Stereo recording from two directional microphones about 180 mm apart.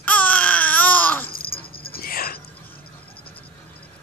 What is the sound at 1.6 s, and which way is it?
Dog, 30° left (ahead or behind).